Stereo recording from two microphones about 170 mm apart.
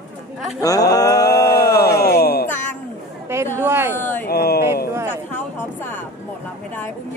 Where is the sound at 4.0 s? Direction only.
10° left (ahead or behind).